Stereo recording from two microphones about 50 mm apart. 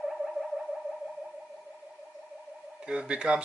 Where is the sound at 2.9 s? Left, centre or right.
Centre.